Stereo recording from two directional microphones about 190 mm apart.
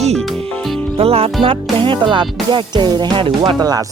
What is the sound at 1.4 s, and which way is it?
Music, 30° right (ahead or behind).